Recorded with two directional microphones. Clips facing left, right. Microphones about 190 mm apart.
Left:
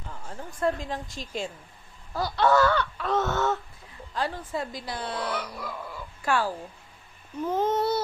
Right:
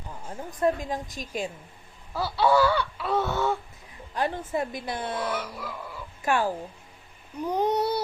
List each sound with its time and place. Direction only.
0.1 s a woman's voice: 20° right (ahead or behind)
2.1 s a sound: 5° right (ahead or behind)
4.1 s speech: 20° right (ahead or behind)
5.4 s a sound: 5° right (ahead or behind)
6.2 s a woman's voice: 15° right (ahead or behind)
7.4 s babbling: 15° right (ahead or behind)